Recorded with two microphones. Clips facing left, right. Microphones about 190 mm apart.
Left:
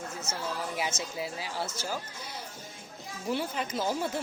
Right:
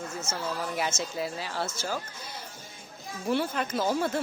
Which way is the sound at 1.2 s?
10° left (ahead or behind).